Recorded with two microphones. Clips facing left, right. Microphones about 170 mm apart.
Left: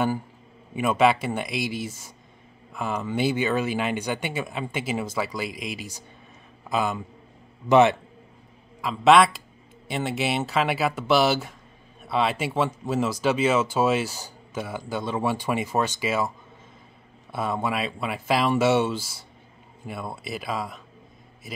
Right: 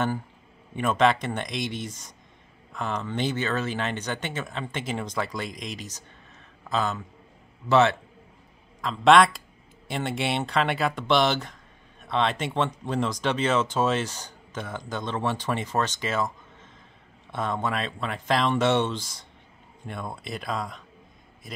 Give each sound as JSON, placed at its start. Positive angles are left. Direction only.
{"t": 0.7, "sound": "speech", "side_deg": 10}
{"t": 8.8, "sound": "speech", "side_deg": 5}
{"t": 17.3, "sound": "speech", "side_deg": 10}